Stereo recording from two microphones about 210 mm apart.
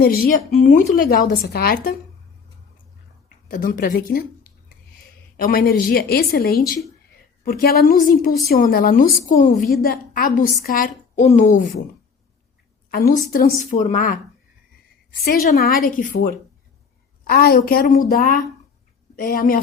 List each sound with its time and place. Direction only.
0.0 s a woman's voice: 45° left (ahead or behind)
3.5 s a woman's voice: 40° left (ahead or behind)
5.4 s a woman's voice: 45° left (ahead or behind)
12.9 s a woman's voice: 40° left (ahead or behind)
15.2 s a woman's voice: 45° left (ahead or behind)